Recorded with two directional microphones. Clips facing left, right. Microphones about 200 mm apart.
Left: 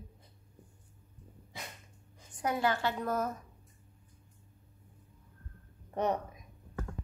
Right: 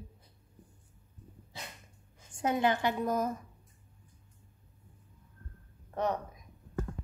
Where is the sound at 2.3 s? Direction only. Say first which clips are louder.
Right 2 dB; 25° right (ahead or behind).